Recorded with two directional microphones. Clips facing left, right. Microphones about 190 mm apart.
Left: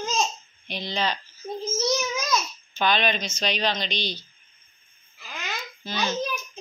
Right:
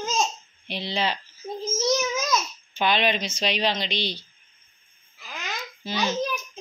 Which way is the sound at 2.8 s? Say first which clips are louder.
Right 1 dB; 25° right (ahead or behind).